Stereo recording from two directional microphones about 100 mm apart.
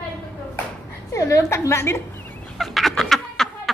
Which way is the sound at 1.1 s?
30° left (ahead or behind).